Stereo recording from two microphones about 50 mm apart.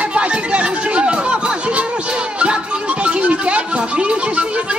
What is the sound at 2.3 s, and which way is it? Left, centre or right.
Music, right.